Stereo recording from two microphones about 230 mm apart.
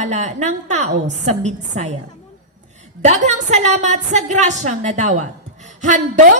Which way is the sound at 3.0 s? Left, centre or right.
Right.